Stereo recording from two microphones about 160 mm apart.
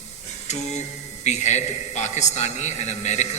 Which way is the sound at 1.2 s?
45° left (ahead or behind).